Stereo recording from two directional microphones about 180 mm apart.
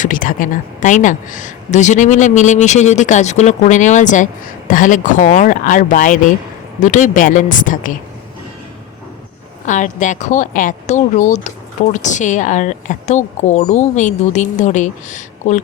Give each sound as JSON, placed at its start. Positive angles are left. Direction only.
{"t": 0.0, "sound": "speech", "side_deg": 50}
{"t": 9.6, "sound": "speech", "side_deg": 45}